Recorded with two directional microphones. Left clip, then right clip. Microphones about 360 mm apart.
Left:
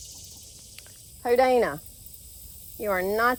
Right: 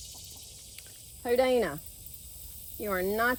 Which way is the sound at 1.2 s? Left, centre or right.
Centre.